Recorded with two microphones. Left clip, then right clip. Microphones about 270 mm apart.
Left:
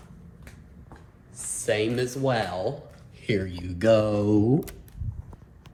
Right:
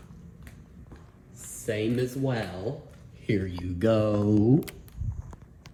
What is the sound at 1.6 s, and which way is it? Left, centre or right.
Speech, centre.